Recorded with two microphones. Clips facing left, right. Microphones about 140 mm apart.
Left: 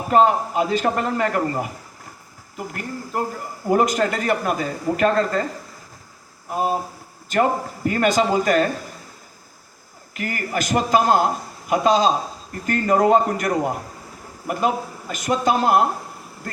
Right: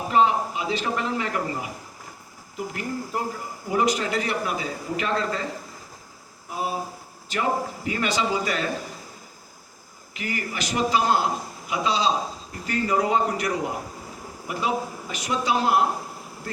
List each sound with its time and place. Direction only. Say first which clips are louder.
0.1 s a man's voice: left 4 dB; 50° left (ahead or behind)
6.5 s a man's voice: left 6 dB; 50° left (ahead or behind)
10.2 s a man's voice: left 5 dB; 50° left (ahead or behind)